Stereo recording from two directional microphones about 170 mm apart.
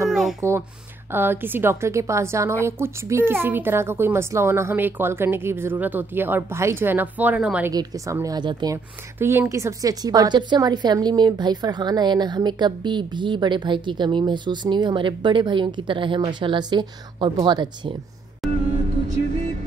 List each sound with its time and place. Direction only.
0.1 s a sound: centre (ahead or behind)
0.4 s speech: 15° right (ahead or behind)
7.7 s a woman's voice: 20° right (ahead or behind)
9.2 s a woman's voice: 15° right (ahead or behind)
18.4 s music: centre (ahead or behind)